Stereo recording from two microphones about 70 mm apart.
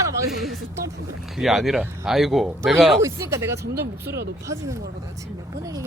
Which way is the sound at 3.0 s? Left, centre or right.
Right.